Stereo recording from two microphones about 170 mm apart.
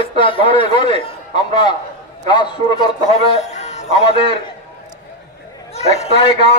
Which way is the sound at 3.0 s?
40° left (ahead or behind).